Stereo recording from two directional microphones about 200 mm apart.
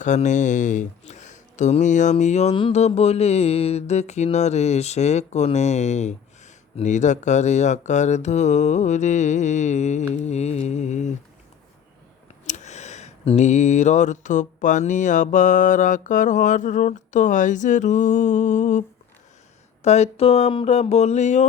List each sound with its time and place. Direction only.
0.0 s speech: 35° left (ahead or behind)
12.5 s speech: 35° left (ahead or behind)